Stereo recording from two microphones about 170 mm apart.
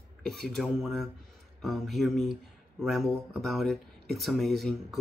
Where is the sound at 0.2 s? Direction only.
Centre (ahead or behind).